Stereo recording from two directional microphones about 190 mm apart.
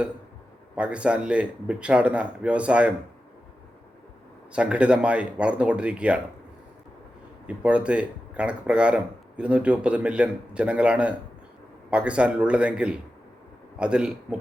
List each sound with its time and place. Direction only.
0.8 s speech: 5° right (ahead or behind)
4.5 s speech: 5° right (ahead or behind)
7.4 s speech: 5° right (ahead or behind)